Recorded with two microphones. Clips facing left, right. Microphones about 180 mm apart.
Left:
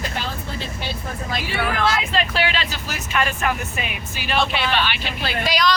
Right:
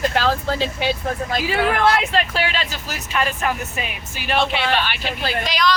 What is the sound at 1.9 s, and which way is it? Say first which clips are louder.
Speech: right 4 dB; 60° right (ahead or behind).